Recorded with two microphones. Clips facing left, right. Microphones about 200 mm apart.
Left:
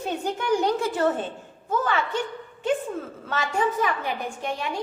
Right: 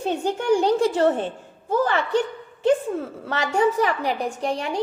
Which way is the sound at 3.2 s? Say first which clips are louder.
Right 4 dB; 35° right (ahead or behind).